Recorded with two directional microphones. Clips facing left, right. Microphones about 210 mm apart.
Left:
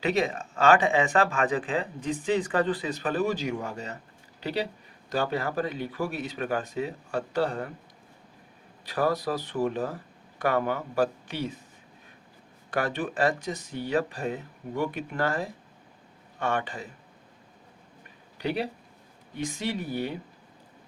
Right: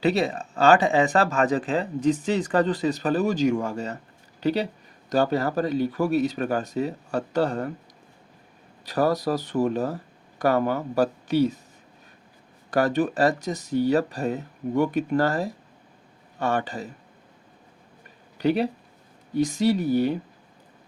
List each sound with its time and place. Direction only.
0.0 s speech: 35° right (ahead or behind)
8.8 s speech: 40° right (ahead or behind)
12.7 s speech: 40° right (ahead or behind)
18.3 s speech: 45° right (ahead or behind)